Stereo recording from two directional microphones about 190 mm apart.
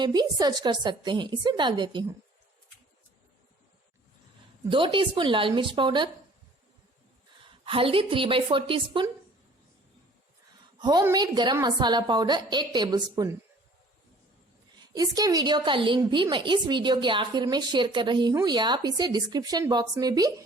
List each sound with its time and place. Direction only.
0.0 s a woman's voice: 20° right (ahead or behind)
4.6 s a woman's voice: 25° right (ahead or behind)
7.6 s a woman's voice: 30° right (ahead or behind)
10.8 s a woman's voice: 20° right (ahead or behind)
14.9 s a woman's voice: 20° right (ahead or behind)